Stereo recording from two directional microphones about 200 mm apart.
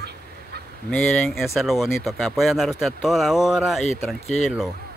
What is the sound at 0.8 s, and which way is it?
Speech, 5° left (ahead or behind).